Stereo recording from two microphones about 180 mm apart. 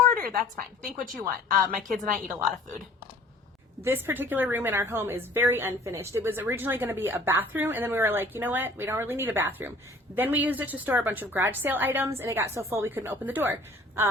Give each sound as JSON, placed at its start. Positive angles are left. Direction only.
{"t": 0.1, "sound": "a sound", "side_deg": -50}
{"t": 1.5, "sound": "a woman's voice", "side_deg": -50}
{"t": 3.8, "sound": "a woman's voice", "side_deg": -10}